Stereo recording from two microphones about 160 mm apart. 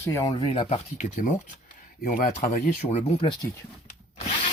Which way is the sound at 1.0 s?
55° left (ahead or behind).